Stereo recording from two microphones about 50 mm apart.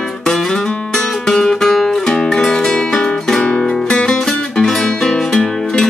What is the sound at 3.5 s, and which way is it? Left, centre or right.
Music, left.